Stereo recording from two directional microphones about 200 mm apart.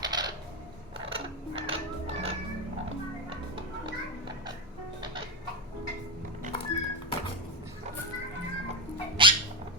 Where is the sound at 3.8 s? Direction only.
20° right (ahead or behind).